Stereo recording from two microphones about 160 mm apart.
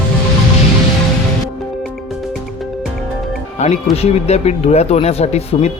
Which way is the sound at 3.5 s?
40° left (ahead or behind).